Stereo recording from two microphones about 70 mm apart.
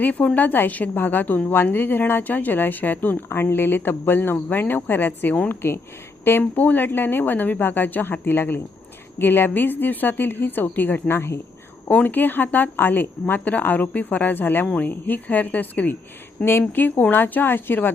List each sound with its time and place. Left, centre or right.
0.0 s a woman's voice: left
11.1 s speech: left
11.9 s a woman's voice: left